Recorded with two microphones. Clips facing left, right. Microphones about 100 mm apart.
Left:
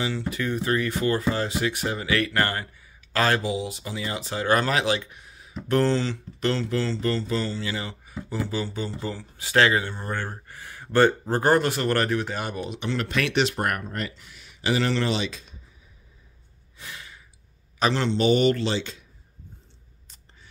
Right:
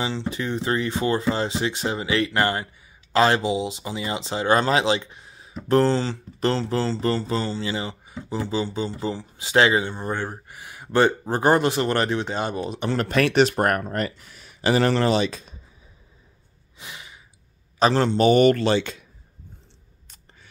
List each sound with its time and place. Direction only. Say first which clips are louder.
0.0 s speech: right 1 dB; 25° right (ahead or behind)
12.6 s speech: right 4 dB; 40° right (ahead or behind)
16.7 s gasp: right 1 dB; 20° right (ahead or behind)
17.7 s speech: right 4 dB; 40° right (ahead or behind); by 19.0 s 55° right (ahead or behind)